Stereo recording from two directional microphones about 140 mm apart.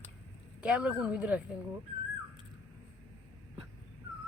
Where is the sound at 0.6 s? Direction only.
10° right (ahead or behind).